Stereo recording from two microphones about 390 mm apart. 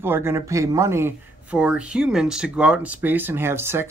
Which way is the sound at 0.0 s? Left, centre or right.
Centre.